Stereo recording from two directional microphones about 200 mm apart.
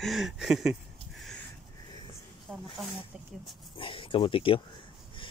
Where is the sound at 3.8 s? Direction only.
25° left (ahead or behind).